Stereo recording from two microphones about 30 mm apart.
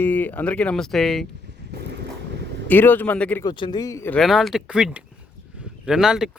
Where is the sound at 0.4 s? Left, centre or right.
Left.